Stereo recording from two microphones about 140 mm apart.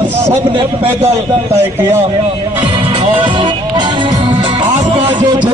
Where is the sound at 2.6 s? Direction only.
35° right (ahead or behind).